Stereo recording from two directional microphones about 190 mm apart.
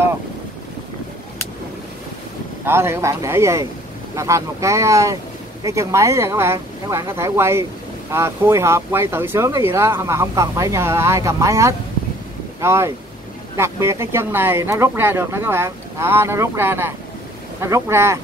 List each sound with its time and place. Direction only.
2.6 s speech: 10° right (ahead or behind)